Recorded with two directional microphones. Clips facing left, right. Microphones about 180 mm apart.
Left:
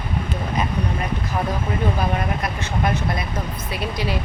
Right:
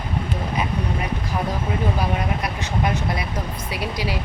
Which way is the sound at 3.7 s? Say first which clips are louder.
Left 1 dB; 10° right (ahead or behind).